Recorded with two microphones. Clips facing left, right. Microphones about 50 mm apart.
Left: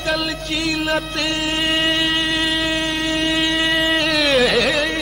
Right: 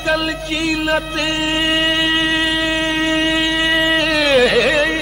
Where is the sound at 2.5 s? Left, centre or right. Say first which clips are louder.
Right 2 dB; centre.